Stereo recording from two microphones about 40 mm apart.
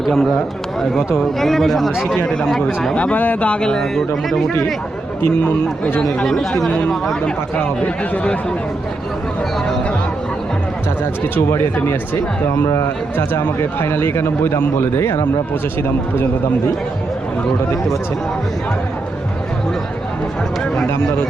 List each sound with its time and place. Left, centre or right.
0.0 s a man's voice: centre
1.4 s speech: centre
2.9 s speech: left
3.2 s speech: left
3.5 s speech: left; by 4.5 s centre
5.2 s speech: left
6.2 s speech: centre
8.1 s speech: left
11.4 s speech: left
12.5 s speech: left